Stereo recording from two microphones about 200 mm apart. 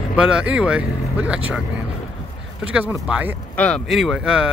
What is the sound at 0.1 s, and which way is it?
Speech, 5° right (ahead or behind).